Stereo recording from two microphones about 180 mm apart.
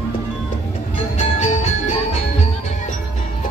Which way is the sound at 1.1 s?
40° left (ahead or behind).